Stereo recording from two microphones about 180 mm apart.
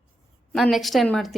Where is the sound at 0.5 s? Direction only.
Centre (ahead or behind).